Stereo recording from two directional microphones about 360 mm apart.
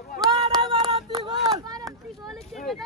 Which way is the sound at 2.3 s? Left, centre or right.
Centre.